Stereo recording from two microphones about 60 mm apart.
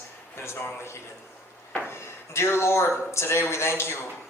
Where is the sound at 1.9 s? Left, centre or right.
Left.